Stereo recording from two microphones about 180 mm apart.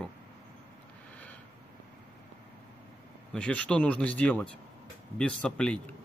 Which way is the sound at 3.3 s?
5° left (ahead or behind).